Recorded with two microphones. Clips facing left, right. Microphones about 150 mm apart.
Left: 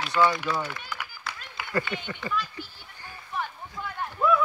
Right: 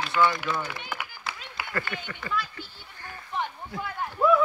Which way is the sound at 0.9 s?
55° right (ahead or behind).